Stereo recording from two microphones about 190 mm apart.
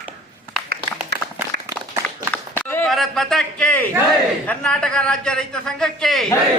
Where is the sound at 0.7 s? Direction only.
50° right (ahead or behind).